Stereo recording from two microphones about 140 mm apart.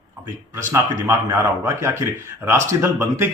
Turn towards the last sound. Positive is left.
turn(degrees=-20)  # may be behind; listen again after turning